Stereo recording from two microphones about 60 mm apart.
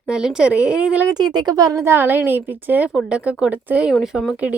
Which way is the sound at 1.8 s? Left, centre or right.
Right.